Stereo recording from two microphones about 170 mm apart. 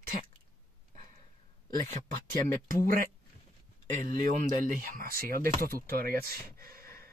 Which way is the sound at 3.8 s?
55° right (ahead or behind).